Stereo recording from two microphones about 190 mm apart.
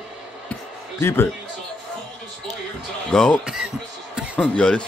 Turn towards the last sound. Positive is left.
turn(degrees=5)  # may be behind; listen again after turning